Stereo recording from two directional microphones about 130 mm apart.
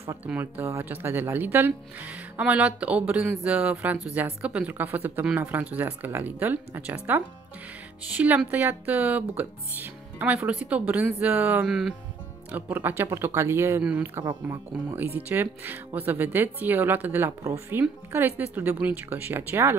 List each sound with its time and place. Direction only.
0.0 s speech: 20° right (ahead or behind)